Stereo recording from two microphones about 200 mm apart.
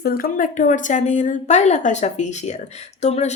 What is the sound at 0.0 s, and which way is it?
A woman's voice, 45° left (ahead or behind).